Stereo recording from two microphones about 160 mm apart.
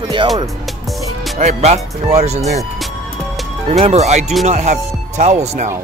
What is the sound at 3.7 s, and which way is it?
Speech, 40° right (ahead or behind).